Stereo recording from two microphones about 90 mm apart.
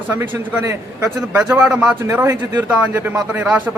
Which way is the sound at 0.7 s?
35° right (ahead or behind).